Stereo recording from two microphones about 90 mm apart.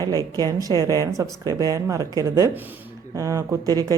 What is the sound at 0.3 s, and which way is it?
Speech, 45° right (ahead or behind).